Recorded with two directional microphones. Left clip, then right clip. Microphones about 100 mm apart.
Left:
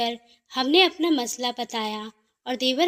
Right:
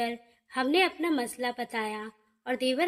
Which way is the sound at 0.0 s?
25° left (ahead or behind).